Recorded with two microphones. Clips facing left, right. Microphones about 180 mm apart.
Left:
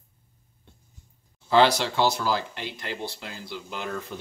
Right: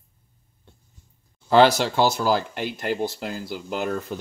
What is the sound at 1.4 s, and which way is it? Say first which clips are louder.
Speech: right 4 dB; 50° right (ahead or behind).